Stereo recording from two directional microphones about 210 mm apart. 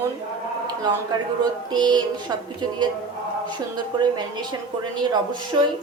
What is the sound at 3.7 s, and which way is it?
Speech, 20° right (ahead or behind).